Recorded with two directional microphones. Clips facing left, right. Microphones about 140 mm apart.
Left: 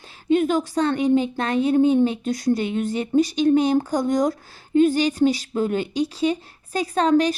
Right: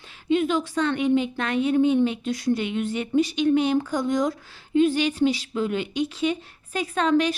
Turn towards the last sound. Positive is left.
turn(degrees=40)  # may be behind; listen again after turning